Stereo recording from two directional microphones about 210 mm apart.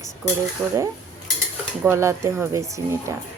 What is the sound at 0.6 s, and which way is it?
Speech, 10° right (ahead or behind).